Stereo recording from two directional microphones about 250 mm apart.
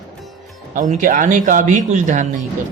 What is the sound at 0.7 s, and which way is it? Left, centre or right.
Speech, right.